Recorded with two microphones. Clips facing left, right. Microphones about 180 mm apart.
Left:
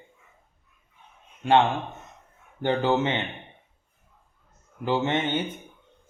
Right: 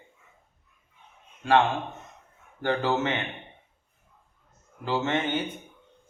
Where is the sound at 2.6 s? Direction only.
20° left (ahead or behind).